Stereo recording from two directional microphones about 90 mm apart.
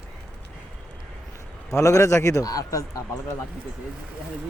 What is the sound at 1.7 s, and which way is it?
Speech, 35° left (ahead or behind).